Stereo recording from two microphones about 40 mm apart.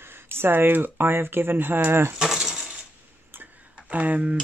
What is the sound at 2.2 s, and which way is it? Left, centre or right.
Coin, centre.